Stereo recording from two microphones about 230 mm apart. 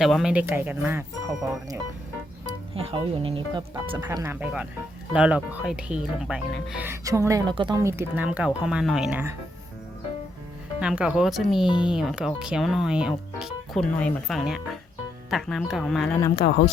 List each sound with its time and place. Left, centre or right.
0.0 s speech: centre
2.7 s speech: right; by 9.3 s centre
10.8 s speech: centre
11.7 s speech: centre
11.9 s speech: centre
16.4 s speech: left